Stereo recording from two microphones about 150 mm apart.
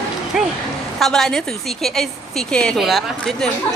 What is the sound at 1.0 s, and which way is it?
Speech, centre (ahead or behind).